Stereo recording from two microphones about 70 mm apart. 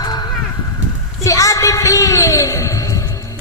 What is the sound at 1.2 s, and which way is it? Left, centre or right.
A man's voice, left.